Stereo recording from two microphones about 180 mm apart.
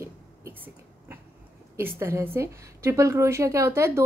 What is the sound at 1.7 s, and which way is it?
A woman's voice, 15° right (ahead or behind).